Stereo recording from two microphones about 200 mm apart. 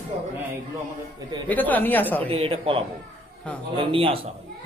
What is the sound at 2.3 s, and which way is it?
Speech, 30° right (ahead or behind).